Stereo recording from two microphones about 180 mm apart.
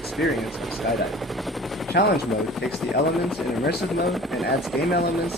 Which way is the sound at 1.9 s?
60° left (ahead or behind).